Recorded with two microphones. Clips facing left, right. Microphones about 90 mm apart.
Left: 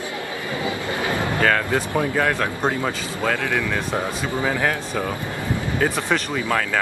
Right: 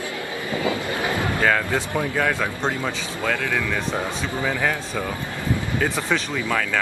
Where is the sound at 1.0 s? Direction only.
20° right (ahead or behind).